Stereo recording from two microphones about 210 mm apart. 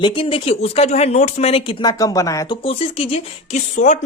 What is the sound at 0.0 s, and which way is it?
Speech, 25° left (ahead or behind).